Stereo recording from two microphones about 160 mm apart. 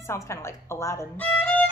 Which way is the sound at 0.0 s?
15° left (ahead or behind).